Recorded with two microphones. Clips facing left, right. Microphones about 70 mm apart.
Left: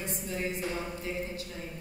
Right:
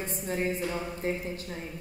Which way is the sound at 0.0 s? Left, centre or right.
Right.